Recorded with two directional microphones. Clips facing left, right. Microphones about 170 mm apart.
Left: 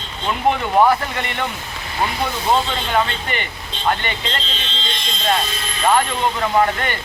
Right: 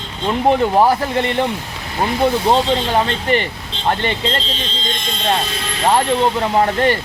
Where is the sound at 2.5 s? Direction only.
35° right (ahead or behind).